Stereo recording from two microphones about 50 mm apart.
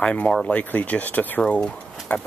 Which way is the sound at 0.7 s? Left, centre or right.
Left.